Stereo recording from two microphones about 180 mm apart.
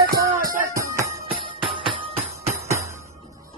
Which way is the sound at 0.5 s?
15° right (ahead or behind).